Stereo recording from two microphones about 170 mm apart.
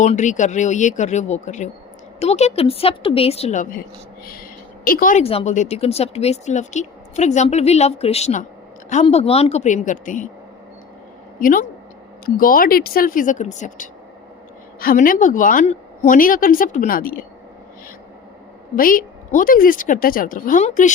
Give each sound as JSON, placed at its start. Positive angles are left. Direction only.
{"t": 0.0, "sound": "a woman's voice", "side_deg": 45}
{"t": 4.3, "sound": "a sound", "side_deg": 55}
{"t": 5.2, "sound": "speech", "side_deg": 35}
{"t": 11.3, "sound": "a woman's voice", "side_deg": 55}
{"t": 14.8, "sound": "a woman's voice", "side_deg": 55}
{"t": 18.8, "sound": "a woman's voice", "side_deg": 55}